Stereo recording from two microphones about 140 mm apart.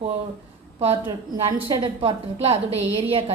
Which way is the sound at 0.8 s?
45° right (ahead or behind).